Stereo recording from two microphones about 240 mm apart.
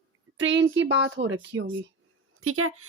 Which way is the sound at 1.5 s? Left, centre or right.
Centre.